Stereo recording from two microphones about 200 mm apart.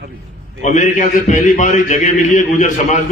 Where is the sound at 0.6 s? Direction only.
40° left (ahead or behind).